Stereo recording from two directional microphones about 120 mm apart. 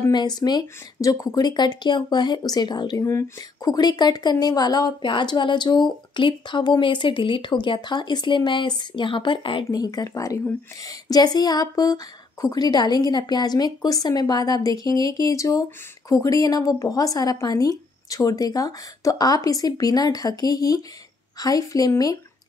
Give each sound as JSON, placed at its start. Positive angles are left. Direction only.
{"t": 0.1, "sound": "speech", "side_deg": 35}
{"t": 9.7, "sound": "speech", "side_deg": 30}